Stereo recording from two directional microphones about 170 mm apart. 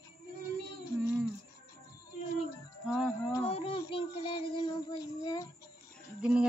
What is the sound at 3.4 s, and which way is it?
Child singing, 35° left (ahead or behind).